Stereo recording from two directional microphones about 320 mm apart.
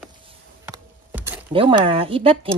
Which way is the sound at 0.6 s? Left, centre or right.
Centre.